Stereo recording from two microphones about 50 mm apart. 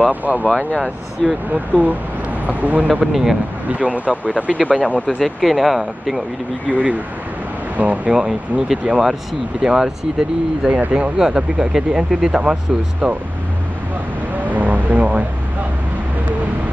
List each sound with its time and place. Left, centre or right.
0.0 s speech: right
1.5 s speech: right
2.9 s speech: centre
3.7 s speech: right
5.0 s speech: centre
6.7 s speech: right
8.1 s speech: centre
14.4 s vehicle: right